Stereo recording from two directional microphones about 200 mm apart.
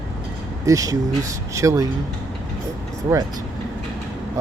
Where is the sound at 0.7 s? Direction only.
15° right (ahead or behind).